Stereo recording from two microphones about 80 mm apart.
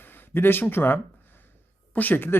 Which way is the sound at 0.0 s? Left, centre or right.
Left.